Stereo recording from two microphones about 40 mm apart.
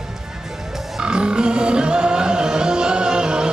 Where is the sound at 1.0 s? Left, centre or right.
Right.